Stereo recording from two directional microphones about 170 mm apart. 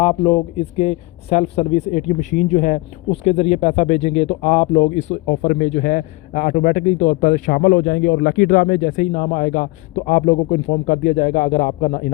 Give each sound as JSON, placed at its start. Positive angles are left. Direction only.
{"t": 0.0, "sound": "speech", "side_deg": 30}
{"t": 5.5, "sound": "a man's voice", "side_deg": 50}
{"t": 7.6, "sound": "a man's voice", "side_deg": 70}